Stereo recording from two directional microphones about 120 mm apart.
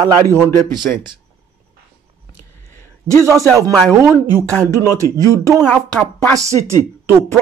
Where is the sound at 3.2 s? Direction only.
25° right (ahead or behind).